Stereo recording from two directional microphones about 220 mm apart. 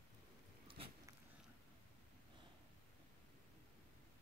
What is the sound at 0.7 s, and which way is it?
Biting, 25° right (ahead or behind).